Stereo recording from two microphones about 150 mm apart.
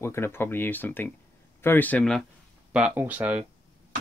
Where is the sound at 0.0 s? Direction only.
15° left (ahead or behind).